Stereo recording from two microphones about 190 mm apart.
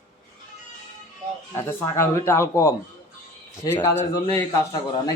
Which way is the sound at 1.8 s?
15° left (ahead or behind).